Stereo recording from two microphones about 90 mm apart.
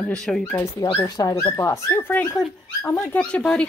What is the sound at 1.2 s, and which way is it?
Speech, 45° left (ahead or behind).